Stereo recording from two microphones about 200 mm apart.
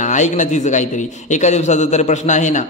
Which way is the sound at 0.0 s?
35° left (ahead or behind).